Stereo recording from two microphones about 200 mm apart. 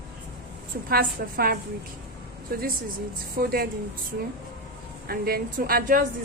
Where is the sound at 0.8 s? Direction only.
50° right (ahead or behind).